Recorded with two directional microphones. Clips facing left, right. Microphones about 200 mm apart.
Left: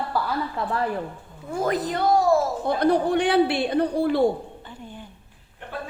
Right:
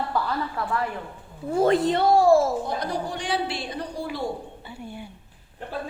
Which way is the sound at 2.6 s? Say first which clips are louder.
Left 8 dB; 60° left (ahead or behind).